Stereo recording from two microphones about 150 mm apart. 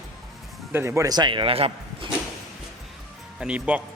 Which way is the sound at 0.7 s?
15° right (ahead or behind).